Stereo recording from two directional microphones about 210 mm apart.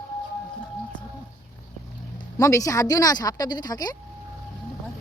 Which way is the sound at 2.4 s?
15° left (ahead or behind).